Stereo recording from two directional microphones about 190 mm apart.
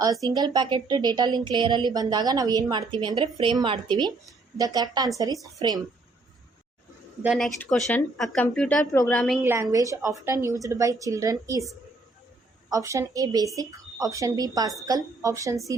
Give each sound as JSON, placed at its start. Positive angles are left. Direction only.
{"t": 0.0, "sound": "a woman's voice", "side_deg": -20}
{"t": 7.2, "sound": "speech", "side_deg": 0}
{"t": 9.4, "sound": "a woman's voice", "side_deg": -15}
{"t": 12.7, "sound": "a woman's voice", "side_deg": -15}